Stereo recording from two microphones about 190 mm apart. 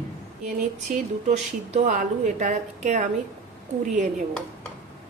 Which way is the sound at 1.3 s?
40° right (ahead or behind).